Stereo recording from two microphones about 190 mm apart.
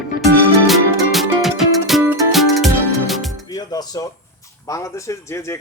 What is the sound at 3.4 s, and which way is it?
Speech, 20° left (ahead or behind).